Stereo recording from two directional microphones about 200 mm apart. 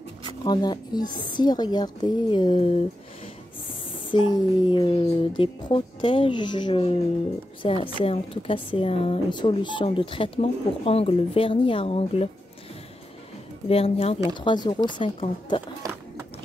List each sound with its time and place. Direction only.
0.5 s speech: 20° left (ahead or behind)
4.1 s speech: 25° left (ahead or behind)
13.7 s speech: 30° left (ahead or behind)
15.8 s a sound: 15° right (ahead or behind)